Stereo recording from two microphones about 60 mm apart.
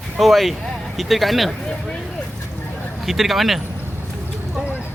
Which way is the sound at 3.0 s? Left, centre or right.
Centre.